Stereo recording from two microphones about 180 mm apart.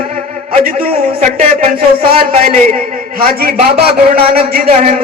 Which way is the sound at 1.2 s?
35° right (ahead or behind).